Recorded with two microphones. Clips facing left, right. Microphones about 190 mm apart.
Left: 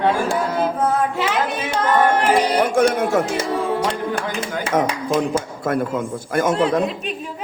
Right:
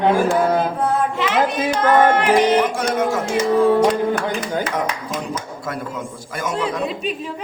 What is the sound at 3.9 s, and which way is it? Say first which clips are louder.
Speech: right 4 dB; 25° left (ahead or behind).